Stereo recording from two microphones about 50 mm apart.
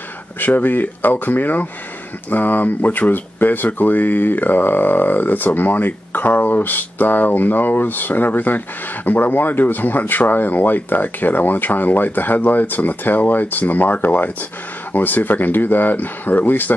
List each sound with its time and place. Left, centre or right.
0.4 s speech: left